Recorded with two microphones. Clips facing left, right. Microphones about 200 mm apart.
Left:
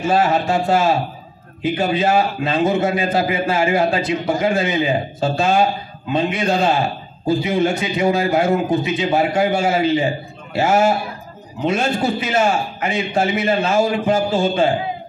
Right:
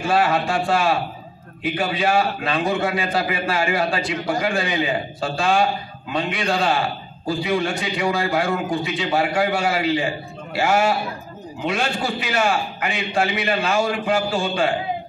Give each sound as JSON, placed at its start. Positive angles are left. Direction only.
{"t": 0.0, "sound": "a man's voice", "side_deg": 20}